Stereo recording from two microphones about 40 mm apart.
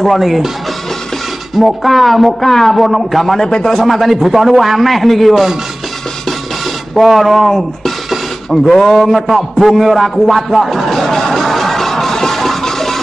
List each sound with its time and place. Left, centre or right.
0.0 s a man's voice: centre
1.5 s a man's voice: centre
3.3 s a man's voice: centre
3.6 s a man's voice: centre
7.0 s a sound: centre